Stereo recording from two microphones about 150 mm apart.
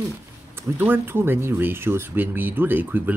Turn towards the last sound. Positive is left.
turn(degrees=-10)  # may be behind; listen again after turning